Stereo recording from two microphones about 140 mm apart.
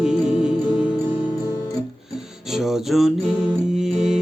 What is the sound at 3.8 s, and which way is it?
Music, centre (ahead or behind).